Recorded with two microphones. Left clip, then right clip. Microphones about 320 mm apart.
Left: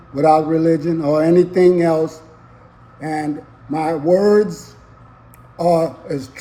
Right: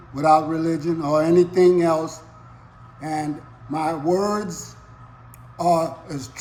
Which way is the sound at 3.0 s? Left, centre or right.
Centre.